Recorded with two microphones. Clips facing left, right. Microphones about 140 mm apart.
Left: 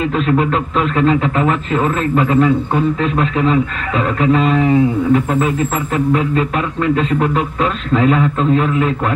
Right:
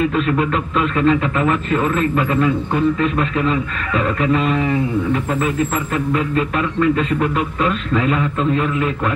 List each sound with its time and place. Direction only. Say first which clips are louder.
0.1 s a man's voice: left 3 dB; 25° left (ahead or behind)
7.0 s a man's voice: left 3 dB; 25° left (ahead or behind)